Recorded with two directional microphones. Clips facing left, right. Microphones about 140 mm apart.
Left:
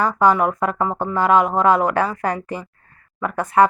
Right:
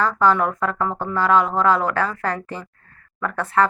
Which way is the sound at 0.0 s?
15° left (ahead or behind).